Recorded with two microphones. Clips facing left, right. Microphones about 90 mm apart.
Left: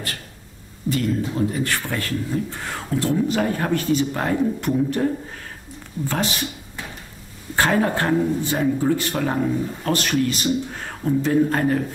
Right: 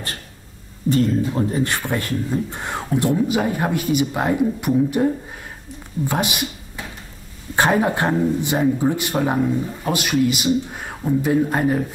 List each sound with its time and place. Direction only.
0.8 s speech: 35° right (ahead or behind)
1.7 s speech: 20° right (ahead or behind)
7.5 s speech: 20° right (ahead or behind)